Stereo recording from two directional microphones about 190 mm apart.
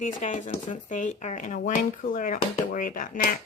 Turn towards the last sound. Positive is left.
turn(degrees=45)  # may be behind; listen again after turning